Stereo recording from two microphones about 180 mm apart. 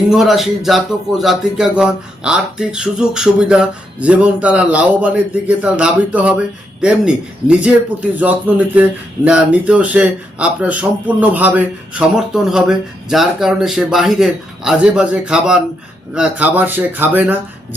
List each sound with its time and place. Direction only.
0.1 s speech: centre (ahead or behind)